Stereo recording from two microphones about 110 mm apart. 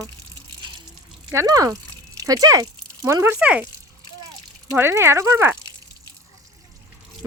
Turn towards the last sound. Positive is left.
turn(degrees=-25)  # may be behind; listen again after turning